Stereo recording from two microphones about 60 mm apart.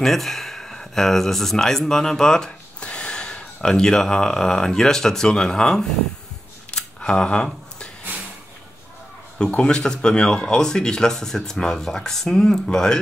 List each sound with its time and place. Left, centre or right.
0.0 s speech: centre
6.7 s a sound: centre
9.4 s speech: centre